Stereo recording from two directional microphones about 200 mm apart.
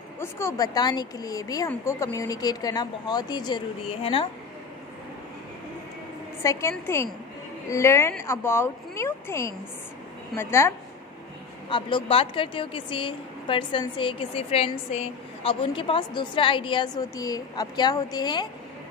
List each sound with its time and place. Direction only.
0.2 s a woman's voice: 15° left (ahead or behind)
6.4 s speech: 15° left (ahead or behind)
11.7 s a woman's voice: 25° left (ahead or behind)